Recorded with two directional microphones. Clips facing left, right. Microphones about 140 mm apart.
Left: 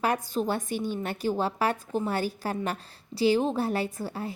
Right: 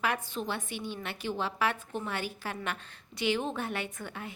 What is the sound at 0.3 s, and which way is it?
A woman's voice, 40° left (ahead or behind).